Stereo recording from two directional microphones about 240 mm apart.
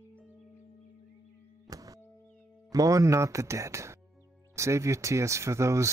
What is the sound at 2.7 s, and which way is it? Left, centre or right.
Speech, centre.